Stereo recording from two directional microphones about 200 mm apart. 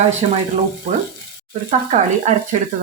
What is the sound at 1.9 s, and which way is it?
Speech, 35° right (ahead or behind).